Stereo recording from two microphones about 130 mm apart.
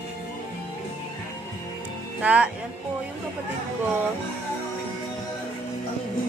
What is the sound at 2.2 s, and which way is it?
Speech, 10° right (ahead or behind).